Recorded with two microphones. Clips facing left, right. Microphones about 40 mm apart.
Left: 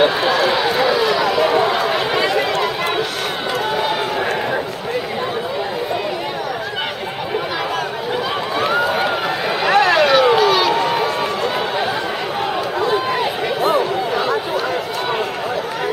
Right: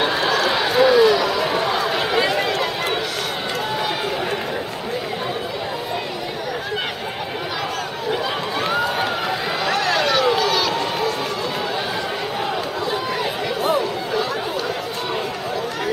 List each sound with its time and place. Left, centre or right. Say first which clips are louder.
0.0 s run: left 4 dB; centre
2.1 s run: left 2 dB; centre
8.5 s run: left 4 dB; centre
9.7 s run: left 7 dB; left
12.8 s run: left 7 dB; left